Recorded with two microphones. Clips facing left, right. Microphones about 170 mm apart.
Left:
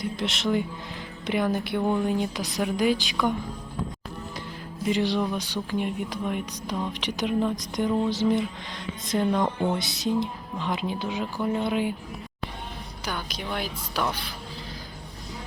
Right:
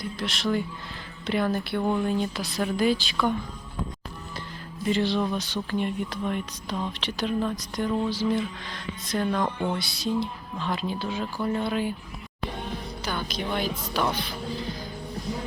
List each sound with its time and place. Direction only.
0.0 s speech: 20° left (ahead or behind)
4.9 s speech: 15° left (ahead or behind)
13.1 s speech: 10° left (ahead or behind)